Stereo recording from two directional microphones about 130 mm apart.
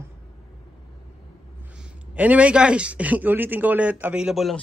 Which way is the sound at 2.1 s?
10° right (ahead or behind).